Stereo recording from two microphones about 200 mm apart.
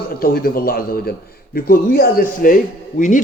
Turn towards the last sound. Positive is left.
turn(degrees=40)  # may be behind; listen again after turning